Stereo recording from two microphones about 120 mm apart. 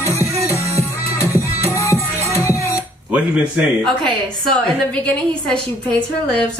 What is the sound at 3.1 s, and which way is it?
Speech, 10° right (ahead or behind).